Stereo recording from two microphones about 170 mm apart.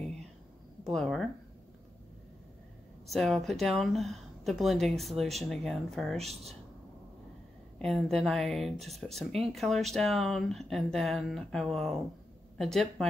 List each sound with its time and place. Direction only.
0.8 s speech: centre (ahead or behind)
3.1 s speech: centre (ahead or behind)
6.1 s speech: 40° right (ahead or behind)
7.8 s a woman's voice: centre (ahead or behind)